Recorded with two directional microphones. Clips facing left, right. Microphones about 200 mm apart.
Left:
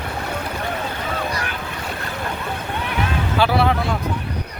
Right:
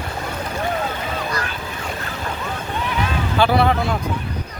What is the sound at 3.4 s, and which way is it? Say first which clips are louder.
Speech: right 2 dB; 5° left (ahead or behind).